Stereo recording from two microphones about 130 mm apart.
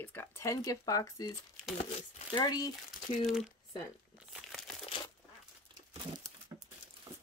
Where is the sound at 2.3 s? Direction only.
30° left (ahead or behind).